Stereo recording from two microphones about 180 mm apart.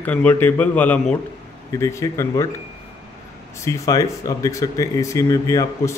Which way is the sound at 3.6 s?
20° left (ahead or behind).